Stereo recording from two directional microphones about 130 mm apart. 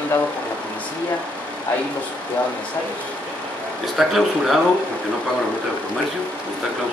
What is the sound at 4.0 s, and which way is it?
Speech, centre (ahead or behind).